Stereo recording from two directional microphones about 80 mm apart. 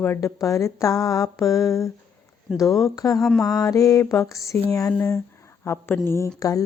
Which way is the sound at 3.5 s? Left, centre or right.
Left.